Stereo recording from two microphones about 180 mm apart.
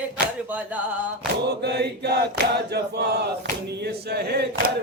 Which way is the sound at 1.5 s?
65° right (ahead or behind).